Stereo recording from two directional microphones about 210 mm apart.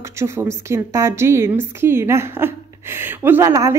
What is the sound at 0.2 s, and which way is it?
A woman's voice, 15° right (ahead or behind).